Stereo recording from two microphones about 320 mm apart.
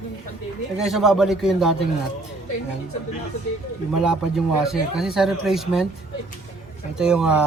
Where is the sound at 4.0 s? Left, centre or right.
Centre.